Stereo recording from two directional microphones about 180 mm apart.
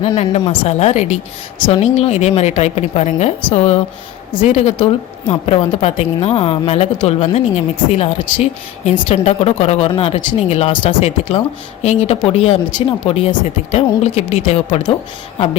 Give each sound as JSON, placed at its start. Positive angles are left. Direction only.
{"t": 0.0, "sound": "a woman's voice", "side_deg": 35}